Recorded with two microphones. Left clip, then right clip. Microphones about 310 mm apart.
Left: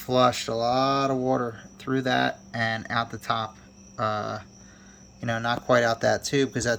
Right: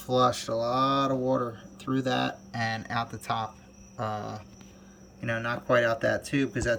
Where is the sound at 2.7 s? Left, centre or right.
Centre.